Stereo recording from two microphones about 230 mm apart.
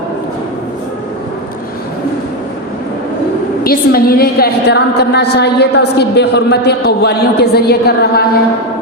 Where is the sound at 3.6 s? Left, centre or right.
Left.